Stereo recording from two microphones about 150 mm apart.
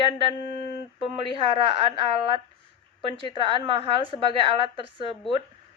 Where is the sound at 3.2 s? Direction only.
35° right (ahead or behind).